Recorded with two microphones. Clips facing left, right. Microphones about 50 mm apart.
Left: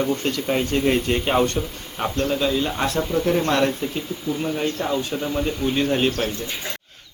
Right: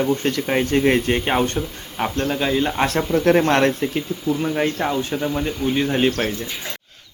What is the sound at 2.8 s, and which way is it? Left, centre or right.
Speech, right.